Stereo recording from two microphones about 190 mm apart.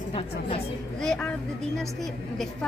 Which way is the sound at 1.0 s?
5° left (ahead or behind).